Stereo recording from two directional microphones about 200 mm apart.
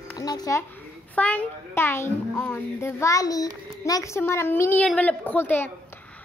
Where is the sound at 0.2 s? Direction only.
20° left (ahead or behind).